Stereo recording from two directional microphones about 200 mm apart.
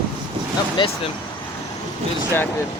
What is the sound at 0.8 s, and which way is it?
Speech, 25° left (ahead or behind).